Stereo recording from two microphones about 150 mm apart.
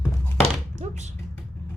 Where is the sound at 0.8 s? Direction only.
50° right (ahead or behind).